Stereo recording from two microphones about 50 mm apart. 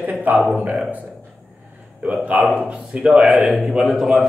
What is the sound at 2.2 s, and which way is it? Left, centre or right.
Speech, right.